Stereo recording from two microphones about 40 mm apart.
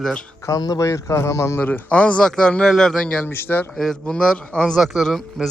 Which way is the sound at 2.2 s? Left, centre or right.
Left.